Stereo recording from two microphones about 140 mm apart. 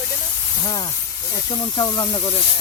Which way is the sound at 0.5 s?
30° left (ahead or behind).